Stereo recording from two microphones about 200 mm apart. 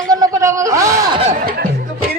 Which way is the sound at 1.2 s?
40° right (ahead or behind).